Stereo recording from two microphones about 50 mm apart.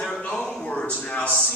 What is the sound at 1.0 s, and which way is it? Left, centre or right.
Speech, left.